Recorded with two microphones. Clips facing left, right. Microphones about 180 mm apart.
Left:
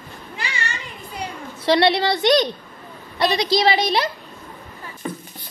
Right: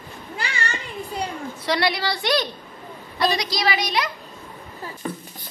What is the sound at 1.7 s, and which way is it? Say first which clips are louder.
A woman's voice: left 6 dB; 25° left (ahead or behind).